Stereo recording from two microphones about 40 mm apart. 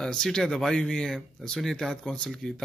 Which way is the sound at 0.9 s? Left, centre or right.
Centre.